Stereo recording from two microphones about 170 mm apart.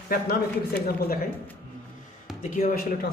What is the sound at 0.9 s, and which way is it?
Speech, 60° left (ahead or behind).